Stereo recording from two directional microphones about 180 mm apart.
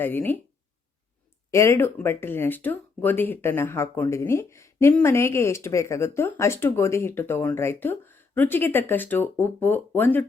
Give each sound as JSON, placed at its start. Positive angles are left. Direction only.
{"t": 0.0, "sound": "speech", "side_deg": 10}
{"t": 1.5, "sound": "speech", "side_deg": 15}